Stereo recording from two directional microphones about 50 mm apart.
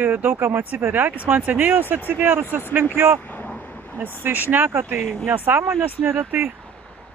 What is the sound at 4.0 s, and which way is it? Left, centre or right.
Speech, right.